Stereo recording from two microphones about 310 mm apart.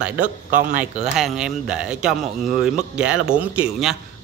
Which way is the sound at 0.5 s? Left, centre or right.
Right.